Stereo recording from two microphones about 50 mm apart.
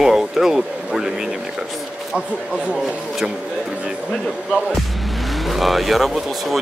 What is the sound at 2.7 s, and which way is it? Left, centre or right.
Speech, centre.